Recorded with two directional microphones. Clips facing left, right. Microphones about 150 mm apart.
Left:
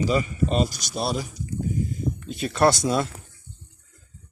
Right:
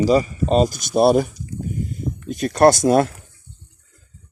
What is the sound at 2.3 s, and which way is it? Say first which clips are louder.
Speech: right 7 dB; 45° right (ahead or behind).